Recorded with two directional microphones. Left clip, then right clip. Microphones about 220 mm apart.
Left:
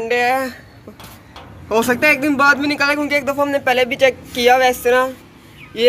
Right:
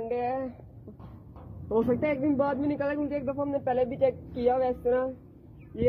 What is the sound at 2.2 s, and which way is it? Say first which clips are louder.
Speech: left 13 dB; 20° left (ahead or behind).